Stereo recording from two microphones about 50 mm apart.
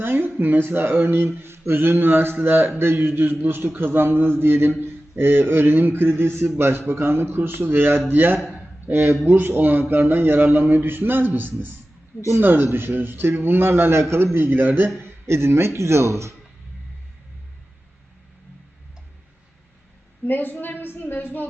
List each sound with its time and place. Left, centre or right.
0.0 s speech: right
14.3 s speech: right
15.0 s speech: right
20.2 s a woman's voice: left